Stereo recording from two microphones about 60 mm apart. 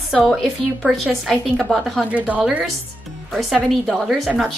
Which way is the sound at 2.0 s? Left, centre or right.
Right.